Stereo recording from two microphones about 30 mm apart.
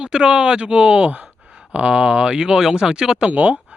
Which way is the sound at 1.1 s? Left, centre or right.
Right.